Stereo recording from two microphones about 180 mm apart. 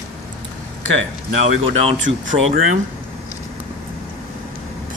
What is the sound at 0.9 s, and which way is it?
Speech, 90° right.